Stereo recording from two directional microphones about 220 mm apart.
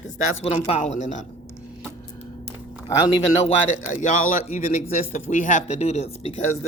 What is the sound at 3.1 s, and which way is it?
Speech, 30° left (ahead or behind).